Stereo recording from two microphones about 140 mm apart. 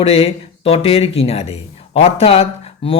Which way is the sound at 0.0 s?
45° left (ahead or behind).